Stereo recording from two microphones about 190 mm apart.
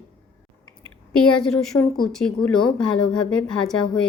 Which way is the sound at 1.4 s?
5° left (ahead or behind).